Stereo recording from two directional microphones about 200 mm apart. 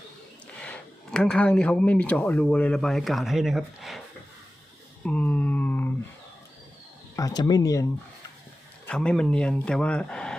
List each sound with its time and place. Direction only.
0.6 s speech: 5° left (ahead or behind)
5.0 s a sound: 5° left (ahead or behind)
7.2 s speech: 20° left (ahead or behind)
8.9 s speech: 5° left (ahead or behind)